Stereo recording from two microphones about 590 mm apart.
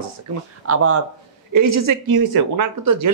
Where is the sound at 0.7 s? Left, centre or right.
Right.